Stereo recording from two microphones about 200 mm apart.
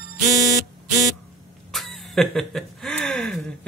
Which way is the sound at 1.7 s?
Centre (ahead or behind).